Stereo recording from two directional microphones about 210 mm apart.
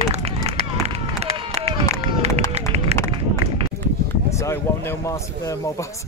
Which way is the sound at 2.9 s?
30° right (ahead or behind).